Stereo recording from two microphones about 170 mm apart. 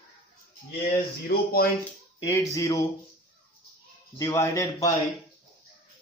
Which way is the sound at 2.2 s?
20° left (ahead or behind).